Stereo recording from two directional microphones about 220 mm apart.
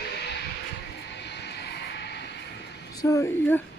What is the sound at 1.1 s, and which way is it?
Vehicle, 50° left (ahead or behind).